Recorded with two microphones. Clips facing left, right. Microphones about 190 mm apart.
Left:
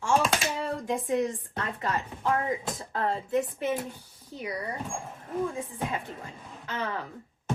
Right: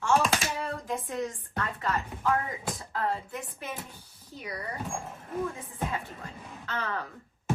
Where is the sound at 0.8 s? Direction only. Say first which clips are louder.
Left 9 dB; 15° left (ahead or behind).